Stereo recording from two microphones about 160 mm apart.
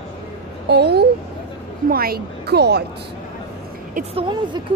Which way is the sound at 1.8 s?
70° right (ahead or behind).